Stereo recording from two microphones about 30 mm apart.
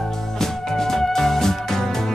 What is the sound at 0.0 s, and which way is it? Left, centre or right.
Music, centre.